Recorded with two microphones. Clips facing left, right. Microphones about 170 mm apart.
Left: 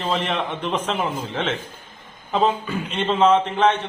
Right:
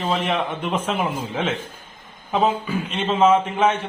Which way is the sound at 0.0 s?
5° right (ahead or behind).